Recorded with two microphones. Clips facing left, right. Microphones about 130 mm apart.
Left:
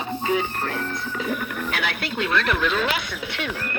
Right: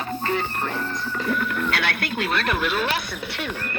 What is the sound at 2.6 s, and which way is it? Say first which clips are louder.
Speech: left 1 dB; 10° right (ahead or behind).